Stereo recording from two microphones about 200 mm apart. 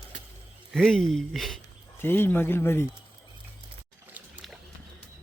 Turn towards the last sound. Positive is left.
turn(degrees=0)  # may be behind; listen again after turning